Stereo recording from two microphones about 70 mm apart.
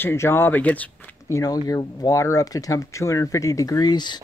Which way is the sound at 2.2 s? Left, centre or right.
Left.